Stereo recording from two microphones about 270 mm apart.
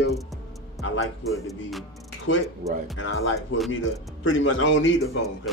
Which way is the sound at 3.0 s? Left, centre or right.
Left.